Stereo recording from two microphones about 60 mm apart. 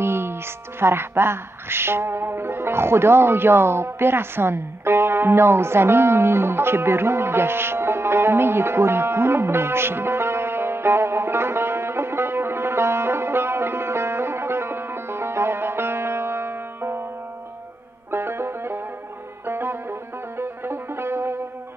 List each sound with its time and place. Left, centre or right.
0.0 s music: right
18.1 s music: right